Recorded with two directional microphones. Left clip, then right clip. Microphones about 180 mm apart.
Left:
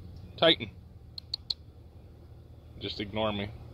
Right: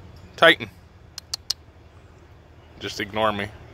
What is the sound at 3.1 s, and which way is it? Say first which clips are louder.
Speech: right 9 dB; centre (ahead or behind).